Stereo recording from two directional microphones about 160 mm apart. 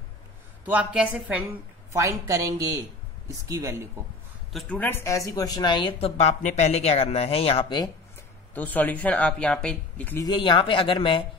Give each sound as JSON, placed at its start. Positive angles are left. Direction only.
{"t": 0.7, "sound": "speech", "side_deg": -10}
{"t": 4.5, "sound": "speech", "side_deg": 5}
{"t": 8.5, "sound": "speech", "side_deg": 10}
{"t": 10.2, "sound": "speech", "side_deg": 30}